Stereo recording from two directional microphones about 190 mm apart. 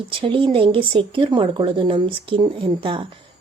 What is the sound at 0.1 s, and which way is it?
Speech, 25° right (ahead or behind).